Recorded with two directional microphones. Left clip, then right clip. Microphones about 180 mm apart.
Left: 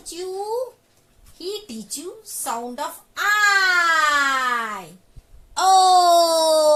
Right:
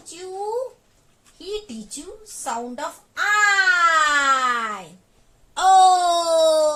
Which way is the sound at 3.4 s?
40° left (ahead or behind).